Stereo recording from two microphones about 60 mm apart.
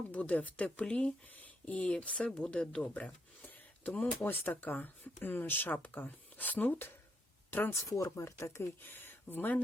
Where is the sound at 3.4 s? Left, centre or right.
Left.